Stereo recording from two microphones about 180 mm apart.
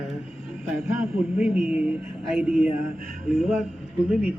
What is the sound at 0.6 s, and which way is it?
Speech, 15° right (ahead or behind).